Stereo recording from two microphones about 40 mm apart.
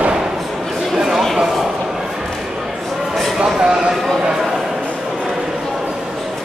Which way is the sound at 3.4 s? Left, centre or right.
Right.